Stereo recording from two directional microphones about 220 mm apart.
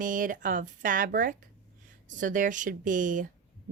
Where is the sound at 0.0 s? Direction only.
40° right (ahead or behind).